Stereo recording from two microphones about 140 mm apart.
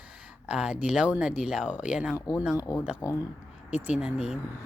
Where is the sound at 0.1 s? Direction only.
10° right (ahead or behind).